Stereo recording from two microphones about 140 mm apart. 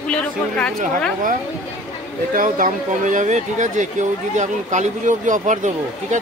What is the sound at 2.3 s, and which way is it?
Speech, 75° right (ahead or behind).